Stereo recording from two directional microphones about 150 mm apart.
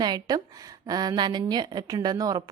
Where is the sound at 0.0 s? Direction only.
30° right (ahead or behind).